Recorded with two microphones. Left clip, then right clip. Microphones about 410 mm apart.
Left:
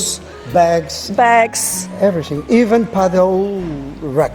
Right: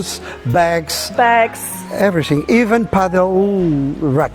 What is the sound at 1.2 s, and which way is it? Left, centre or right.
Speech, left.